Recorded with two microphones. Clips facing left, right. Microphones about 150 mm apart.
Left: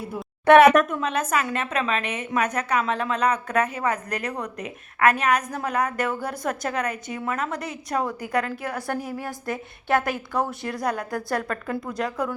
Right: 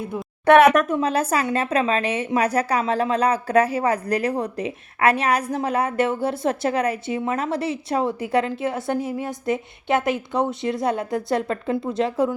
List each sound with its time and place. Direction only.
0.0 s speech: centre (ahead or behind)
0.9 s a woman's voice: 30° right (ahead or behind)